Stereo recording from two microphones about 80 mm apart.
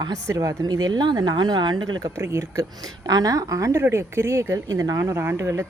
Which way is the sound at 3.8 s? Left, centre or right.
Right.